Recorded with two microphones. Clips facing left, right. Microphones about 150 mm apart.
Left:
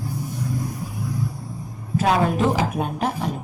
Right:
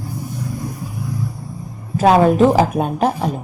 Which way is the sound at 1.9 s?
50° right (ahead or behind).